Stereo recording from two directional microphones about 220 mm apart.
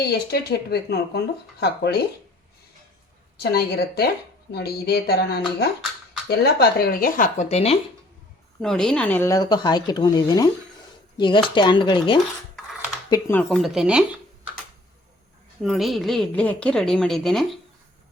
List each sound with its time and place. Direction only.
0.0 s speech: 45° left (ahead or behind)
3.3 s speech: 50° left (ahead or behind); by 7.8 s 30° left (ahead or behind)
8.6 s a woman's voice: centre (ahead or behind)
15.6 s a woman's voice: centre (ahead or behind)